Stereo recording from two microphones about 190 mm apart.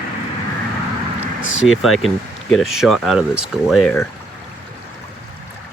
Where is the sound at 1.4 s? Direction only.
90° left.